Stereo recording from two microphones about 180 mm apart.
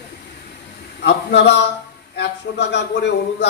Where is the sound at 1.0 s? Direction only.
75° left (ahead or behind).